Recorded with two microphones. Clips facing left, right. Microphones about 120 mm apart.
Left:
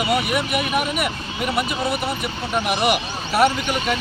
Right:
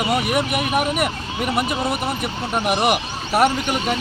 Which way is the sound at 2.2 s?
45° right (ahead or behind).